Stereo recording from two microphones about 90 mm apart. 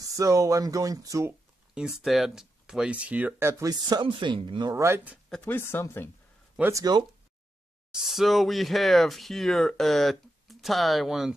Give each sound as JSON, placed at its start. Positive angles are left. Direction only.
{"t": 0.1, "sound": "speech", "side_deg": -40}
{"t": 1.8, "sound": "speech", "side_deg": -5}
{"t": 4.0, "sound": "speech", "side_deg": -65}
{"t": 4.7, "sound": "speech", "side_deg": -25}
{"t": 5.4, "sound": "speech", "side_deg": 25}
{"t": 6.7, "sound": "speech", "side_deg": -40}
{"t": 7.9, "sound": "speech", "side_deg": -5}